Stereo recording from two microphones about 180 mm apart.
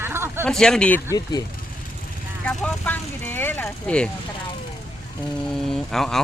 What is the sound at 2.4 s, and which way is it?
Speech, 5° left (ahead or behind).